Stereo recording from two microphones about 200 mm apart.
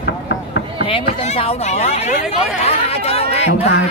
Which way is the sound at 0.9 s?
25° left (ahead or behind).